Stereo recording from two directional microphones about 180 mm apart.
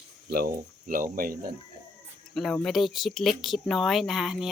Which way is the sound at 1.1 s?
50° right (ahead or behind).